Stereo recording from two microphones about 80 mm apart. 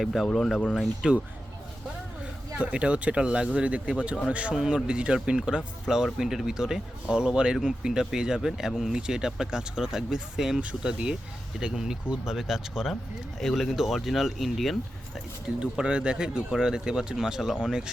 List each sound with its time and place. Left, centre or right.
0.0 s speech: centre
2.6 s speech: centre
15.6 s speech: centre